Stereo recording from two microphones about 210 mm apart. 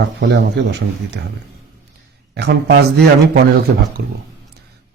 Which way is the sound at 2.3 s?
55° right (ahead or behind).